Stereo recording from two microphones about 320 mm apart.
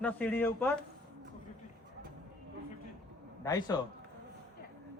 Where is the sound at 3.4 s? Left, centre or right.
Centre.